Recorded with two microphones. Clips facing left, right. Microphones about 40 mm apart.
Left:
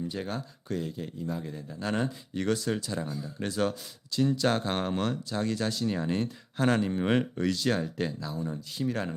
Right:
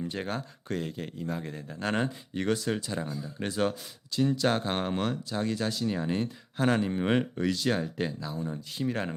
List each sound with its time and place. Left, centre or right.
0.0 s speech: right
2.3 s speech: right
4.1 s speech: centre
8.7 s speech: right